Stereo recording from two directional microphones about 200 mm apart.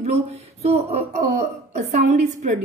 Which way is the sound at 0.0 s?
30° right (ahead or behind).